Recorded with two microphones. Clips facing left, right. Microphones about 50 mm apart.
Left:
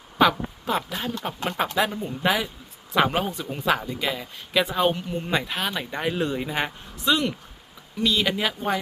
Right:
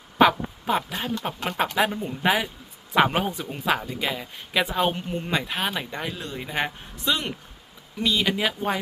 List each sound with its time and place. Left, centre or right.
0.2 s speech: centre
4.9 s speech: right
5.2 s speech: centre
5.9 s speech: centre